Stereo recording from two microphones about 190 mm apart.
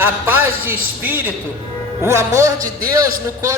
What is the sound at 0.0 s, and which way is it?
A man's voice, 10° right (ahead or behind).